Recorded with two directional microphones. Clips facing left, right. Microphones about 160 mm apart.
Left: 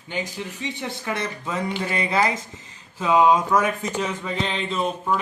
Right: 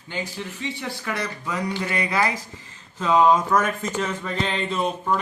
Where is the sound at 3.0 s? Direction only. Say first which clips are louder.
Even; 10° left (ahead or behind).